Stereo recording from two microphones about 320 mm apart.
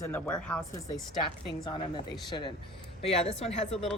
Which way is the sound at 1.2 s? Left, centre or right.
Centre.